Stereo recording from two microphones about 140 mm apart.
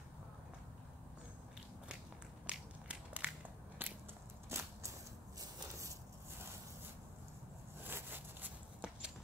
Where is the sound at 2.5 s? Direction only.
10° right (ahead or behind).